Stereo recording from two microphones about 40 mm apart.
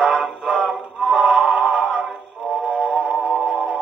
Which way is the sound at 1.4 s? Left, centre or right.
Right.